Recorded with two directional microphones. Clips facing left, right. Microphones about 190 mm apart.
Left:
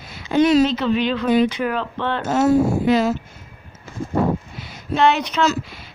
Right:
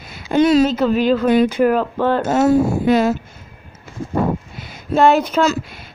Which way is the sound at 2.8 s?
55° right (ahead or behind).